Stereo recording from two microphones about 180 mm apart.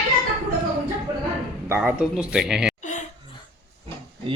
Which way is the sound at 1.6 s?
10° right (ahead or behind).